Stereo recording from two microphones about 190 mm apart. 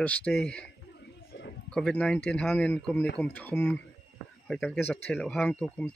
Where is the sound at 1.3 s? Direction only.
65° left (ahead or behind).